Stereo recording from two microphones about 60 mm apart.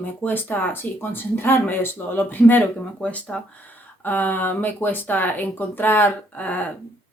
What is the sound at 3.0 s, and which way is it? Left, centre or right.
Speech, left.